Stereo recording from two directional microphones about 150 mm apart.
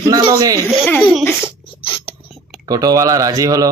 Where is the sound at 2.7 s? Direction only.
25° right (ahead or behind).